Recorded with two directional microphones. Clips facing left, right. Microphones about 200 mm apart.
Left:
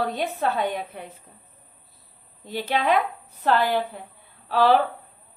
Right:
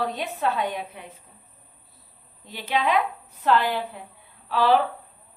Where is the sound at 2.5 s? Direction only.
40° left (ahead or behind).